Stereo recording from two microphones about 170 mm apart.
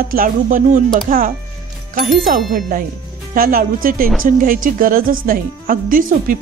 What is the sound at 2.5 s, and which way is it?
Speech, 55° right (ahead or behind).